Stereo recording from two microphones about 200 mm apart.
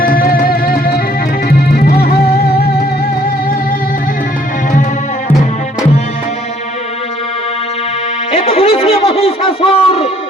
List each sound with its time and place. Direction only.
0.1 s music: 45° left (ahead or behind)
8.3 s music: 30° left (ahead or behind)